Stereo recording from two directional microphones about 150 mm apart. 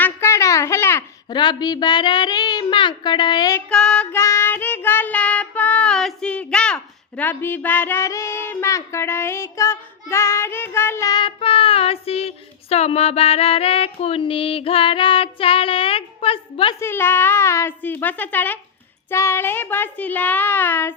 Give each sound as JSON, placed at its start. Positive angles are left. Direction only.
{"t": 0.0, "sound": "a sound", "side_deg": 15}
{"t": 1.3, "sound": "speech", "side_deg": 30}
{"t": 3.7, "sound": "child singing", "side_deg": 5}
{"t": 16.8, "sound": "a child's voice", "side_deg": 15}